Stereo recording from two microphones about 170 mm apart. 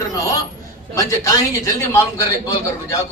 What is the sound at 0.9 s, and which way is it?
A man's voice, 20° left (ahead or behind).